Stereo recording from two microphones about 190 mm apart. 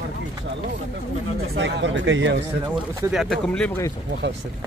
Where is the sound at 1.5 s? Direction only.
70° right (ahead or behind).